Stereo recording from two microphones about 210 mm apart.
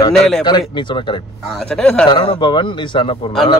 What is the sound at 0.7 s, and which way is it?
Speech, 20° left (ahead or behind).